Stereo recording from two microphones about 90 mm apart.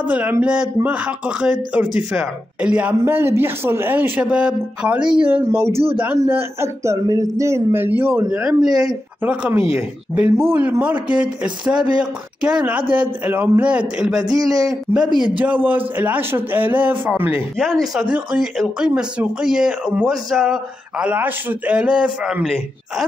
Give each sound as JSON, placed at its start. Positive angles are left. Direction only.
{"t": 0.1, "sound": "a man's voice", "side_deg": -15}
{"t": 3.1, "sound": "speech", "side_deg": -25}
{"t": 4.2, "sound": "a man's voice", "side_deg": -15}
{"t": 5.5, "sound": "speech", "side_deg": -30}
{"t": 8.4, "sound": "a man's voice", "side_deg": -10}
{"t": 14.3, "sound": "a man's voice", "side_deg": -40}
{"t": 14.9, "sound": "speech", "side_deg": -25}
{"t": 17.6, "sound": "a man's voice", "side_deg": 5}
{"t": 18.1, "sound": "a man's voice", "side_deg": -10}
{"t": 21.0, "sound": "a man's voice", "side_deg": -15}